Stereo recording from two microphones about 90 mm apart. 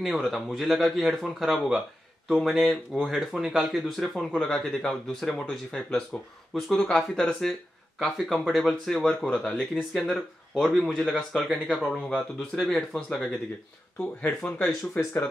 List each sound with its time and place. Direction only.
0.0 s speech: 5° right (ahead or behind); by 14.7 s 15° left (ahead or behind)